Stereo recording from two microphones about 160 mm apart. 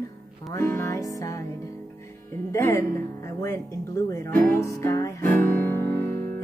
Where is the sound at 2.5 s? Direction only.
15° left (ahead or behind).